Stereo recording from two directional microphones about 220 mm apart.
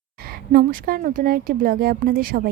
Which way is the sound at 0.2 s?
45° right (ahead or behind).